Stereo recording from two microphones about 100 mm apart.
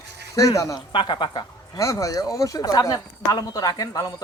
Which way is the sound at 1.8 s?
30° left (ahead or behind).